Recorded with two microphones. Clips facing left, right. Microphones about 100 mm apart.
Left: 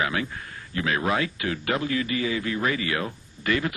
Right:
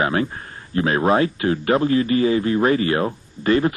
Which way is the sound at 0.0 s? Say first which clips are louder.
Right 6 dB; 40° right (ahead or behind).